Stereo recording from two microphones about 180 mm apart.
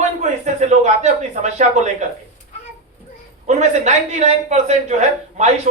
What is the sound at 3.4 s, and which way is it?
A man's voice, 40° right (ahead or behind).